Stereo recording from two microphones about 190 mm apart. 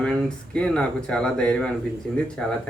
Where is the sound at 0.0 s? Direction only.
5° left (ahead or behind).